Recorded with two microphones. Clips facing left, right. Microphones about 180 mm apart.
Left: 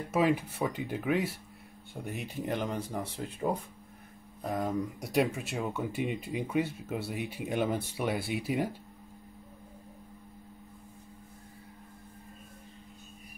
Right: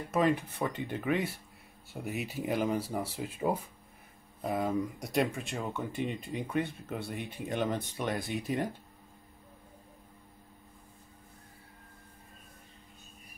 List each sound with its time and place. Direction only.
0.1 s speech: 5° left (ahead or behind)